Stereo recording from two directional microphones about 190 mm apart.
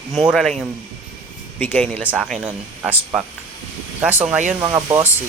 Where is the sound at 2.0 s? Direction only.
5° right (ahead or behind).